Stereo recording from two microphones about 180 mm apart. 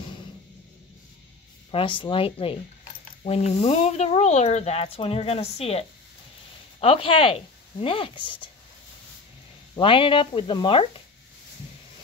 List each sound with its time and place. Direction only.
1.7 s speech: 30° left (ahead or behind)
9.8 s speech: 30° left (ahead or behind)